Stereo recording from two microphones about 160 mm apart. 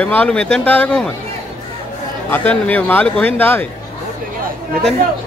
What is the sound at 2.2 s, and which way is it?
Speech, 10° left (ahead or behind).